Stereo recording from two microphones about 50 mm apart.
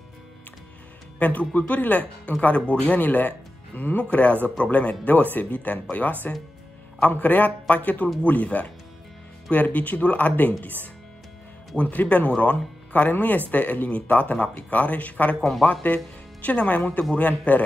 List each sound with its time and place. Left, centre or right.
1.2 s speech: left
11.7 s speech: left
15.6 s speech: left